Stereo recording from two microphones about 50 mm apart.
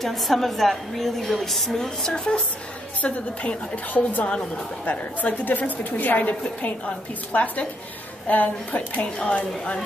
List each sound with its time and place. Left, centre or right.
0.0 s a woman's voice: centre
2.0 s speech: centre
3.0 s a woman's voice: left
8.3 s a woman's voice: left